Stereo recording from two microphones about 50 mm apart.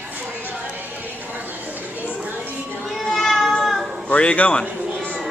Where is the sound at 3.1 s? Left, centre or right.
Centre.